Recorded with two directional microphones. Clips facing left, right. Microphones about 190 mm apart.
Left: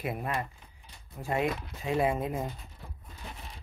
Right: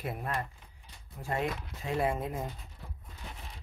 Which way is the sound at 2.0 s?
15° left (ahead or behind).